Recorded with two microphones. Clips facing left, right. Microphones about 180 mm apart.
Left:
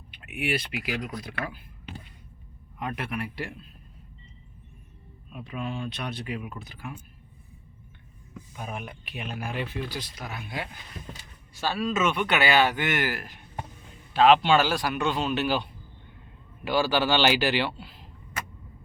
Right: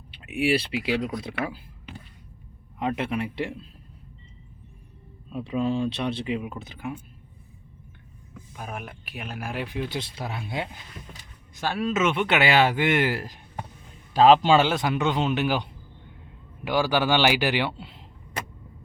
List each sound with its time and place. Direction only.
0.1 s speech: 30° right (ahead or behind)
2.7 s speech: 25° right (ahead or behind)
5.3 s speech: 30° right (ahead or behind)
8.5 s speech: centre (ahead or behind)
10.0 s a man's voice: 25° right (ahead or behind)
14.6 s speech: 20° right (ahead or behind)
16.6 s speech: 15° right (ahead or behind)